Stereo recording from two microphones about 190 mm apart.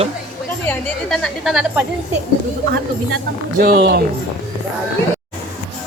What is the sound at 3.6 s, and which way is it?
Speech, 60° right (ahead or behind).